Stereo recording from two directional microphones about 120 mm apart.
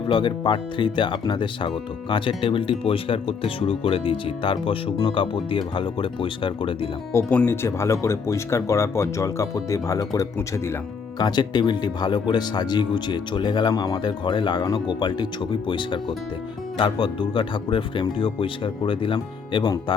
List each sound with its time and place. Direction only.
0.1 s speech: 45° left (ahead or behind)
7.3 s speech: 15° left (ahead or behind); by 19.7 s 40° left (ahead or behind)